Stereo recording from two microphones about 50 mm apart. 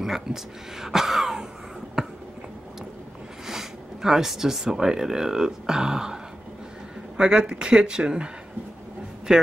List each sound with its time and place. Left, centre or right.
0.0 s speech: centre
3.4 s speech: centre
7.2 s speech: centre
9.3 s speech: centre